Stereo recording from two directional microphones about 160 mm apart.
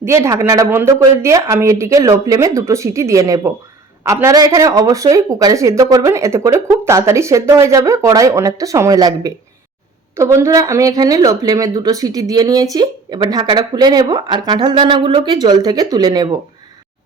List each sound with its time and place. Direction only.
0.0 s speech: 20° right (ahead or behind)